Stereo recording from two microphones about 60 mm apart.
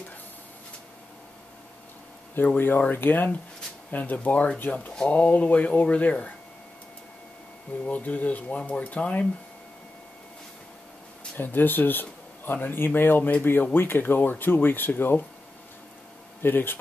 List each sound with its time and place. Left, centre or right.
2.3 s speech: left
7.8 s speech: left
11.3 s speech: left
16.4 s speech: left